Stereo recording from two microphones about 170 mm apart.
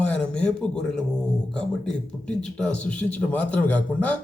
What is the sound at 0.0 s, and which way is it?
A man's voice, 5° left (ahead or behind).